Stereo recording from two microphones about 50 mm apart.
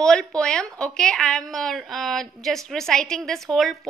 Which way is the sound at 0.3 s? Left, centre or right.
Centre.